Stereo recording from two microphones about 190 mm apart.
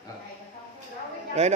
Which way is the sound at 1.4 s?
35° right (ahead or behind).